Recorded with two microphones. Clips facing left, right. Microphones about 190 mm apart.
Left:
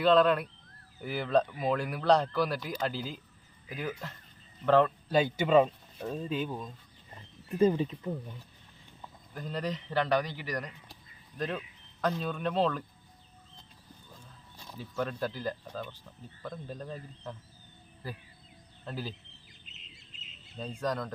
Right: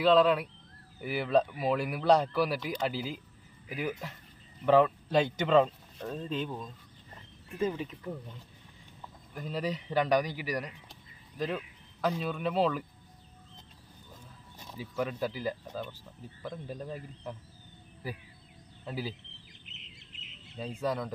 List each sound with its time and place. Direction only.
0.0 s speech: centre (ahead or behind)
7.6 s speech: 35° left (ahead or behind)
9.3 s speech: 5° right (ahead or behind)
14.7 s speech: 5° right (ahead or behind)
20.6 s speech: 5° right (ahead or behind)